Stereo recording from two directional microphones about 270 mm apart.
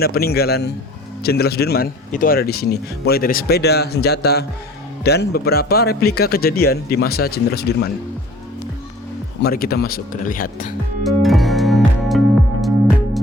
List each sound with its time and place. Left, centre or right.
0.0 s speech: left
9.4 s speech: left
11.0 s music: centre